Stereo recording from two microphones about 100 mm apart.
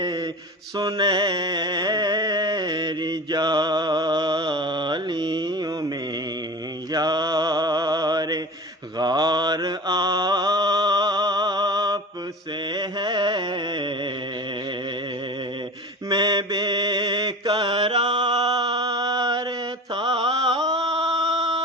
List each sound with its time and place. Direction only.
0.0 s mantra: 40° right (ahead or behind)
0.8 s music: 45° right (ahead or behind)
6.9 s mantra: 40° right (ahead or behind)
12.7 s a sound: 50° right (ahead or behind)
16.0 s mantra: 45° right (ahead or behind)